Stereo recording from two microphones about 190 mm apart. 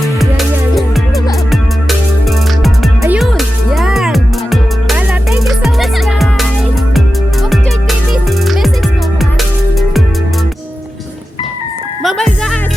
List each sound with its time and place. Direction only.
0.2 s music: centre (ahead or behind)
3.2 s music: centre (ahead or behind)
12.0 s music: centre (ahead or behind)